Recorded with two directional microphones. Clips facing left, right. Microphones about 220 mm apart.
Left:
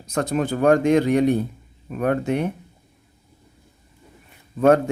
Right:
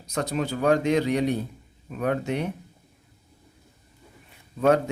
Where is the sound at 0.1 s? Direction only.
50° left (ahead or behind).